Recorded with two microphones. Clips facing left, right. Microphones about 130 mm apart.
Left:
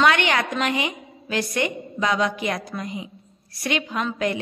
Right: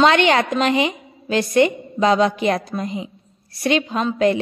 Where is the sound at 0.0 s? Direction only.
25° right (ahead or behind).